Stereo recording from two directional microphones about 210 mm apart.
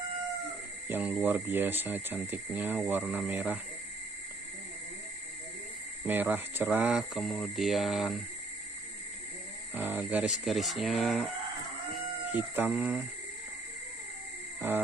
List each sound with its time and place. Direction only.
0.8 s speech: 10° right (ahead or behind)
6.0 s speech: 10° right (ahead or behind)
9.8 s speech: 10° right (ahead or behind)
11.9 s chicken: 10° right (ahead or behind)